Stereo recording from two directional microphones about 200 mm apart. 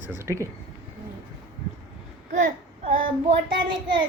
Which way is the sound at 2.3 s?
35° right (ahead or behind).